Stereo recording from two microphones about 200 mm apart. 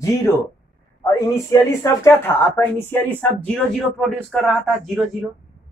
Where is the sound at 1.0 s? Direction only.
15° left (ahead or behind).